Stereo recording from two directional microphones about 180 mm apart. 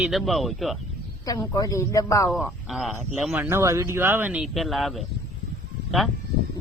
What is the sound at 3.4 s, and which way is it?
Speech, 15° right (ahead or behind).